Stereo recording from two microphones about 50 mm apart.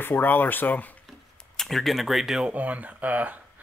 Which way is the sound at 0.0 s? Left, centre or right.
Left.